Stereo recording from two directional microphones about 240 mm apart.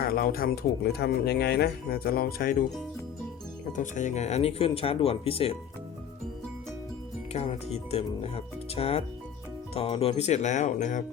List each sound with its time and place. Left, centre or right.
0.0 s speech: left
3.7 s speech: left
7.3 s speech: left